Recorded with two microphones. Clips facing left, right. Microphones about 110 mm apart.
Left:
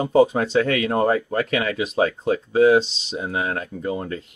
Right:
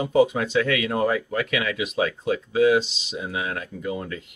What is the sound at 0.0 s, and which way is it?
Speech, 35° left (ahead or behind).